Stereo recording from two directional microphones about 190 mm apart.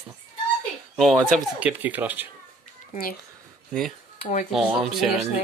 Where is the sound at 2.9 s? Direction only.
50° left (ahead or behind).